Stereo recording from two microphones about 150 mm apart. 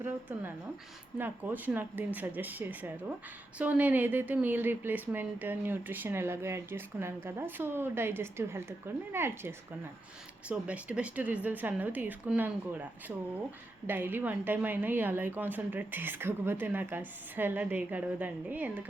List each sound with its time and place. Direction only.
0.0 s a woman's voice: 15° right (ahead or behind)